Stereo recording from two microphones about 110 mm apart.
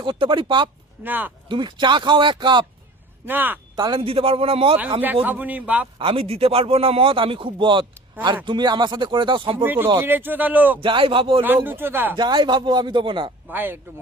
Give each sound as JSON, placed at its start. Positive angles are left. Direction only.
{"t": 0.0, "sound": "speech", "side_deg": -50}
{"t": 1.0, "sound": "speech", "side_deg": -15}
{"t": 1.5, "sound": "speech", "side_deg": -45}
{"t": 3.2, "sound": "speech", "side_deg": -15}
{"t": 3.8, "sound": "a man's voice", "side_deg": -45}
{"t": 5.2, "sound": "speech", "side_deg": -15}
{"t": 6.0, "sound": "a man's voice", "side_deg": -55}
{"t": 9.6, "sound": "speech", "side_deg": -20}
{"t": 10.8, "sound": "speech", "side_deg": -50}
{"t": 11.4, "sound": "speech", "side_deg": -20}
{"t": 12.1, "sound": "speech", "side_deg": -45}
{"t": 13.5, "sound": "speech", "side_deg": -20}